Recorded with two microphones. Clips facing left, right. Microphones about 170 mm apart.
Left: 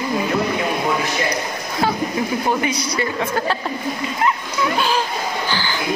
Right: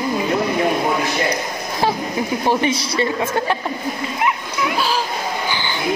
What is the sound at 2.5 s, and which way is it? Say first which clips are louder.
Speech: right 2 dB; 25° right (ahead or behind).